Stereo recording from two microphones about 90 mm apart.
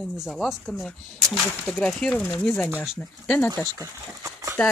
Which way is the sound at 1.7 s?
10° left (ahead or behind).